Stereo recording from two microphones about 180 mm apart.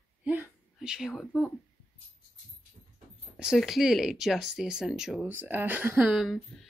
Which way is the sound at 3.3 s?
Centre (ahead or behind).